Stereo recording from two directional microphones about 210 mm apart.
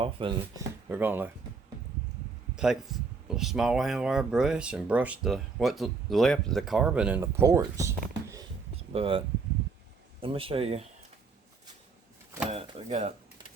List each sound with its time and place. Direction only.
0.0 s speech: 25° right (ahead or behind)
0.9 s speech: 10° right (ahead or behind)
2.6 s speech: 5° right (ahead or behind)
8.7 s a sound: 30° right (ahead or behind)
10.2 s speech: 25° right (ahead or behind)
12.5 s speech: 30° right (ahead or behind)